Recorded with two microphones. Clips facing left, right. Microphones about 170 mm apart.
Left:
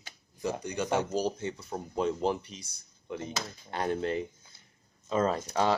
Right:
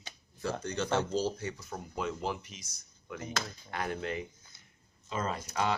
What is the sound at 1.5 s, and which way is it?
Speech, 30° left (ahead or behind).